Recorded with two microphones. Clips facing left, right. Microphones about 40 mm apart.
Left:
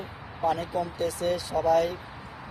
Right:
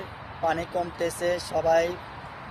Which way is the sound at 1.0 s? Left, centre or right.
Right.